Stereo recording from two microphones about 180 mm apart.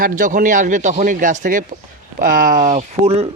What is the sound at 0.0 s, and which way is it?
Speech, 45° right (ahead or behind).